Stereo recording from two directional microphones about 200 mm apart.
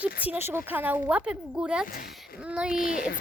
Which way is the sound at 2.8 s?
45° left (ahead or behind).